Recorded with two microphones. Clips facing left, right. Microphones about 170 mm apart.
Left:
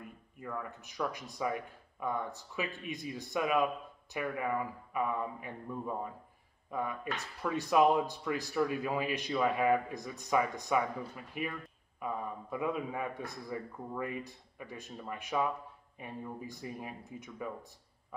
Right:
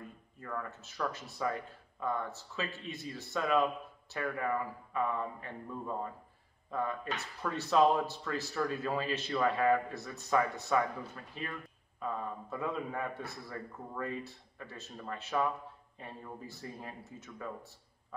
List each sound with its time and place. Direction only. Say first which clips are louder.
0.4 s speech: even; 10° left (ahead or behind)